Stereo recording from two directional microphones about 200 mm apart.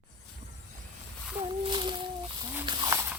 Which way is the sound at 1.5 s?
25° right (ahead or behind).